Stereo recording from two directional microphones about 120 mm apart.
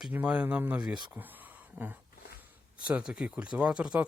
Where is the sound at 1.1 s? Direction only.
15° right (ahead or behind).